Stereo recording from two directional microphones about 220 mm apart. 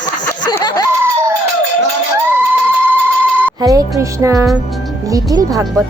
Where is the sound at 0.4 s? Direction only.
20° left (ahead or behind).